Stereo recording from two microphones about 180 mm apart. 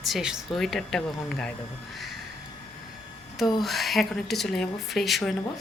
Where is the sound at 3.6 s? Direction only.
Centre (ahead or behind).